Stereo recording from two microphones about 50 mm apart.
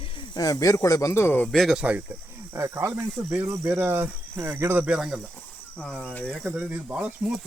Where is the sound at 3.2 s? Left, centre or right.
Right.